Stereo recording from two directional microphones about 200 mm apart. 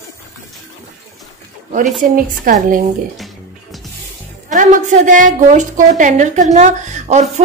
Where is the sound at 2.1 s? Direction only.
45° right (ahead or behind).